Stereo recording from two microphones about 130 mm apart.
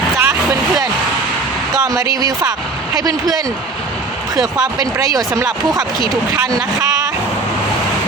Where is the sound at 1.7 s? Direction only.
30° right (ahead or behind).